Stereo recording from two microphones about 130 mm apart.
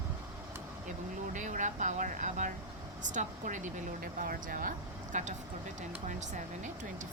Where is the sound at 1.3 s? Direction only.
75° right (ahead or behind).